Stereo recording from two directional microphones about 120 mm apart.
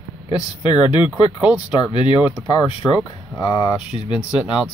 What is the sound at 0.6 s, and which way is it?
Speech, 40° left (ahead or behind).